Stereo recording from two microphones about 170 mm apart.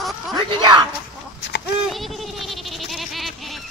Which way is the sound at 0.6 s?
25° right (ahead or behind).